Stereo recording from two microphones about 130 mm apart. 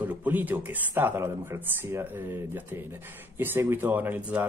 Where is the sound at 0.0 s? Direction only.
15° right (ahead or behind).